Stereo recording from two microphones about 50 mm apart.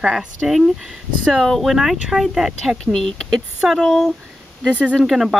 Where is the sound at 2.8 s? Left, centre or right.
Centre.